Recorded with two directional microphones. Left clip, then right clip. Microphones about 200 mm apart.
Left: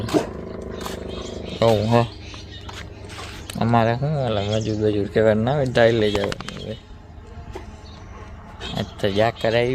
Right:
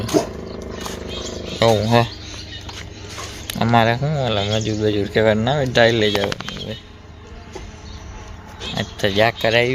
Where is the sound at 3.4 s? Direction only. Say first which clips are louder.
Right 3 dB; centre (ahead or behind).